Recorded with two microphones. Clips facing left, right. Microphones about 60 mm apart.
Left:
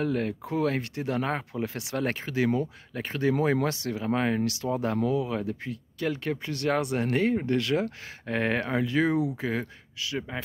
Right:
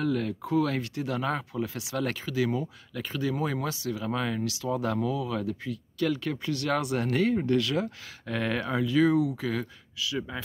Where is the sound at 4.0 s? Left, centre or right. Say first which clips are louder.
Left 6 dB; left.